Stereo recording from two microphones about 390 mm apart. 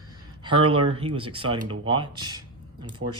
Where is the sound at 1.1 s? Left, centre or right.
Centre.